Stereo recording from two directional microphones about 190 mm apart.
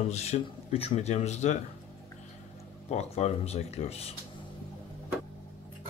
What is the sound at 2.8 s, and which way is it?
Speech, 35° left (ahead or behind).